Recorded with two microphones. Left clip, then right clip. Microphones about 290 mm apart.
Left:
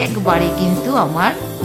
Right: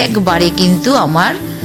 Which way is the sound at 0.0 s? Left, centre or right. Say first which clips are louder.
Right 4 dB; right.